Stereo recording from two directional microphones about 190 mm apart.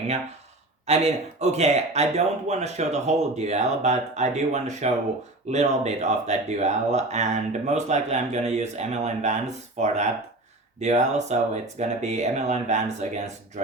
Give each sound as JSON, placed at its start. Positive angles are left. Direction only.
{"t": 0.9, "sound": "speech", "side_deg": -35}